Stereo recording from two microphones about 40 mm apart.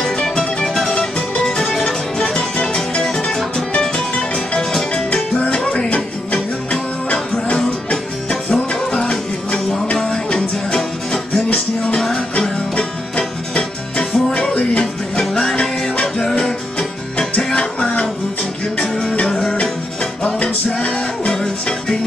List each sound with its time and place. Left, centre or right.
0.2 s music: centre
2.3 s music: left
4.6 s music: centre
5.9 s music: left; by 11.4 s centre
11.5 s music: left
19.2 s music: centre
21.3 s music: centre